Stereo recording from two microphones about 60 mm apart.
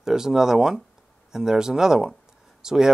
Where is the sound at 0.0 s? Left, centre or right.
Centre.